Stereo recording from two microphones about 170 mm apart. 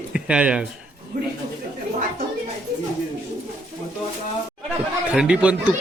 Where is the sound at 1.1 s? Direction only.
55° right (ahead or behind).